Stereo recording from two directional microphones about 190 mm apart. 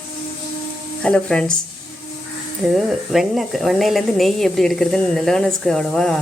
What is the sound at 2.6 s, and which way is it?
Speech, centre (ahead or behind).